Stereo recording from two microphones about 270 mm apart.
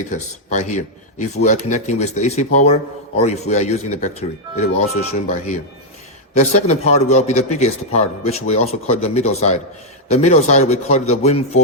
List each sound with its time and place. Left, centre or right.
0.1 s speech: left
6.3 s speech: left